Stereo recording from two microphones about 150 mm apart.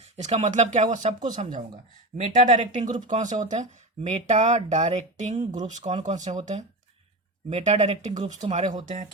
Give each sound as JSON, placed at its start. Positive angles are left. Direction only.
{"t": 0.2, "sound": "speech", "side_deg": -45}
{"t": 7.5, "sound": "speech", "side_deg": -45}
{"t": 8.1, "sound": "speech", "side_deg": -25}
{"t": 8.4, "sound": "speech", "side_deg": -50}